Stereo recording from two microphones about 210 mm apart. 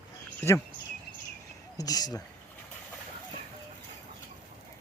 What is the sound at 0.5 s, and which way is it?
Speech, 10° left (ahead or behind).